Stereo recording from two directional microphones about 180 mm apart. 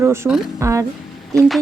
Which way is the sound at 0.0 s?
15° right (ahead or behind).